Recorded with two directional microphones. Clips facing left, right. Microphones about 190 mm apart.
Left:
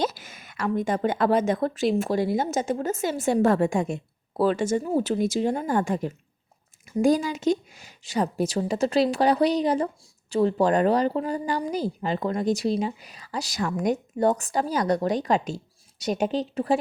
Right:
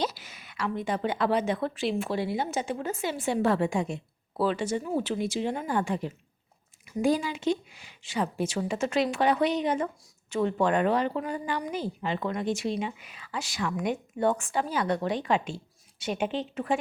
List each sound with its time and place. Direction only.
0.0 s a woman's voice: 50° left (ahead or behind)